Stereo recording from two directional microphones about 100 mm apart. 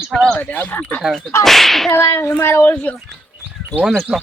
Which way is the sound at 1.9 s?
25° left (ahead or behind).